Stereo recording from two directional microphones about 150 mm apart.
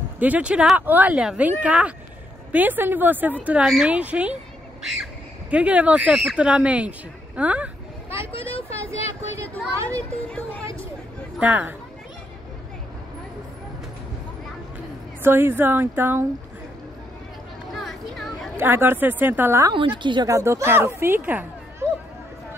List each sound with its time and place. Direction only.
0.2 s speech: 10° right (ahead or behind)
8.1 s vehicle: 35° left (ahead or behind)
9.8 s a child's voice: 10° left (ahead or behind)
11.3 s speech: 10° right (ahead or behind)
15.2 s speech: 15° right (ahead or behind)
17.7 s a sound: centre (ahead or behind)
18.6 s speech: 15° right (ahead or behind)
20.0 s speech: 30° right (ahead or behind)
20.2 s speech: 20° right (ahead or behind)